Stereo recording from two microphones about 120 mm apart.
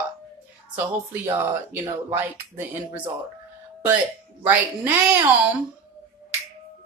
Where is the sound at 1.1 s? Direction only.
15° right (ahead or behind).